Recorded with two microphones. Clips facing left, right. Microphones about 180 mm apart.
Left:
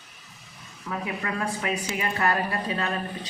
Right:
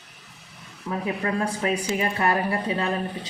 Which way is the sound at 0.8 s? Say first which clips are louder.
Right 4 dB; 30° right (ahead or behind).